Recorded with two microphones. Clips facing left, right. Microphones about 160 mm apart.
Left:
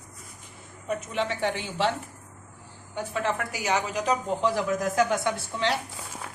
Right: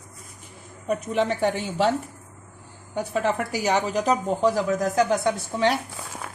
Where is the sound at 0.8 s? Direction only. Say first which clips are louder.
Right 5 dB; 40° right (ahead or behind).